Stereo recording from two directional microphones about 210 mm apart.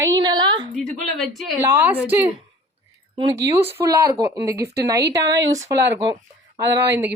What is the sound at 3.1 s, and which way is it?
Speech, 25° right (ahead or behind).